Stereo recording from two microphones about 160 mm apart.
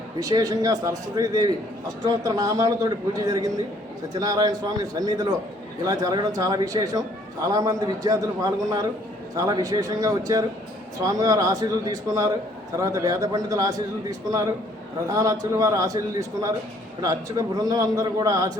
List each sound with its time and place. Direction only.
0.2 s a man's voice: 25° right (ahead or behind)
4.1 s a man's voice: 25° right (ahead or behind)
17.0 s a man's voice: 20° right (ahead or behind)